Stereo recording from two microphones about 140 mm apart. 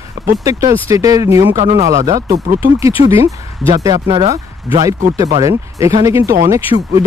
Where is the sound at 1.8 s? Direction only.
20° right (ahead or behind).